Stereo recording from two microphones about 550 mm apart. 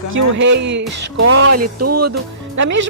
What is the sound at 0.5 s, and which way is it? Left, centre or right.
Speech, centre.